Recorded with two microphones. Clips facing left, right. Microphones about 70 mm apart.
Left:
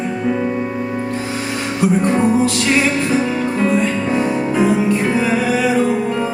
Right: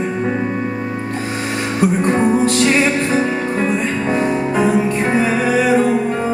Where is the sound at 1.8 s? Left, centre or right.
Right.